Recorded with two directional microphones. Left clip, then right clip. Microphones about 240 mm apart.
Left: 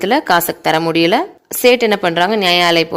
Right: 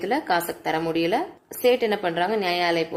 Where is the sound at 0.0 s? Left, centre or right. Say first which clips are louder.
Left 10 dB; left.